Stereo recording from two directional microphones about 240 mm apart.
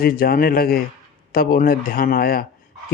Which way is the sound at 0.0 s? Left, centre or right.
Left.